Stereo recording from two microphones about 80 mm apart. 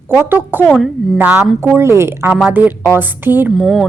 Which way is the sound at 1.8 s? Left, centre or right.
Right.